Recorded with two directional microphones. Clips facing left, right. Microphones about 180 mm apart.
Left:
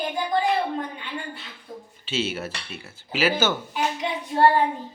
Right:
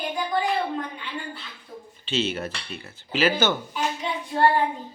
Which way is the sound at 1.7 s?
40° left (ahead or behind).